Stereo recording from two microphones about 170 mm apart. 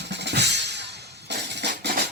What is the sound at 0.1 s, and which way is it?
Drum kit, 85° right.